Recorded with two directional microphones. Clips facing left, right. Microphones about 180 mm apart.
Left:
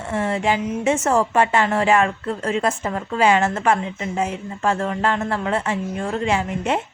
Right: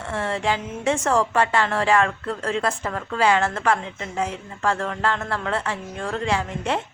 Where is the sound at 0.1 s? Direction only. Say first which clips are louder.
Left 3 dB; 20° left (ahead or behind).